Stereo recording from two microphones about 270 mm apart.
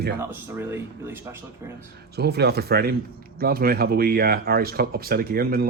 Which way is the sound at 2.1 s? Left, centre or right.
Right.